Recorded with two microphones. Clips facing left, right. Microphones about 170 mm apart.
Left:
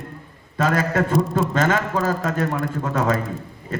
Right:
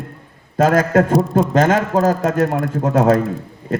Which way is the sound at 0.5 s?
45° right (ahead or behind).